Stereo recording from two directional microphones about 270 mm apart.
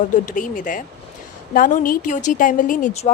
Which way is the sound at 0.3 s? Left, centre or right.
Left.